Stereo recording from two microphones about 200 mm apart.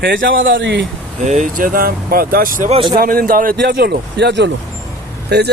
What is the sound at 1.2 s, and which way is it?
Speech, 35° right (ahead or behind).